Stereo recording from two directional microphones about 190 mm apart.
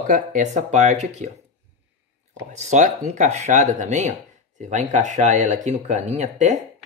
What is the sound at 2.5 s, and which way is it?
Speech, 40° right (ahead or behind).